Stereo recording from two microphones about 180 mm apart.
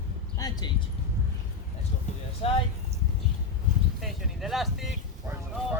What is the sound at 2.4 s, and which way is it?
Speech, 30° left (ahead or behind).